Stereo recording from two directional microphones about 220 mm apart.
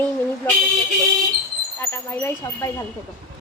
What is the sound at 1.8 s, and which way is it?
Speech, 10° left (ahead or behind).